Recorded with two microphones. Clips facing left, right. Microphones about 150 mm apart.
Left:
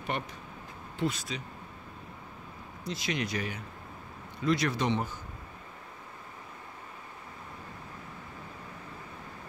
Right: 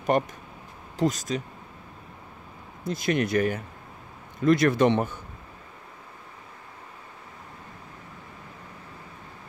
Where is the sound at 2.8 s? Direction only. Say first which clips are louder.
Right 8 dB; 50° right (ahead or behind).